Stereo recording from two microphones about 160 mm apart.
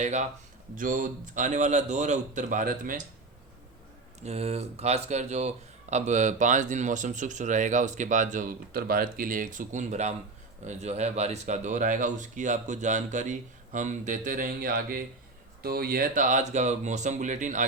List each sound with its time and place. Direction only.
0.0 s speech: 50° right (ahead or behind)
4.2 s speech: 40° right (ahead or behind)